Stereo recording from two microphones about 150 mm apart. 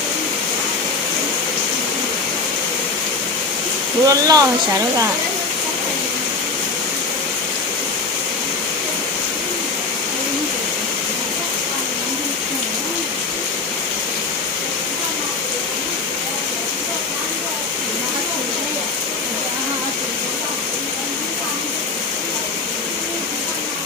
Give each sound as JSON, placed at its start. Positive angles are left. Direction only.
{"t": 4.0, "sound": "speech", "side_deg": -25}